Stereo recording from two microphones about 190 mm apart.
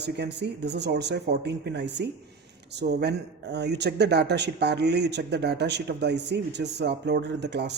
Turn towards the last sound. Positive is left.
turn(degrees=-60)  # may be behind; listen again after turning